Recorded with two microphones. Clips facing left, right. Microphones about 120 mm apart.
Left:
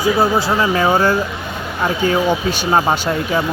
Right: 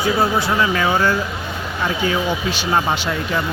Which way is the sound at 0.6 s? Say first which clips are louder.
Left 4 dB; 30° left (ahead or behind).